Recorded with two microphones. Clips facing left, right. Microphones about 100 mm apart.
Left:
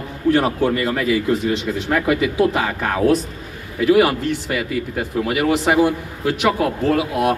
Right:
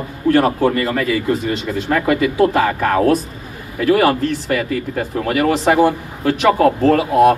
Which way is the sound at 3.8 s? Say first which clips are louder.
Right 1 dB; 15° left (ahead or behind).